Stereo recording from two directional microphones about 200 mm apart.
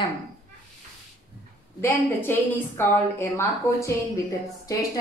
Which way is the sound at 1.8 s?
10° left (ahead or behind).